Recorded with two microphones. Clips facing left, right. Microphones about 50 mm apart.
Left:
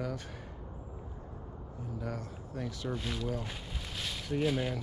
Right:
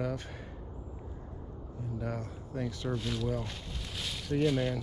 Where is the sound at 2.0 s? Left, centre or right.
Right.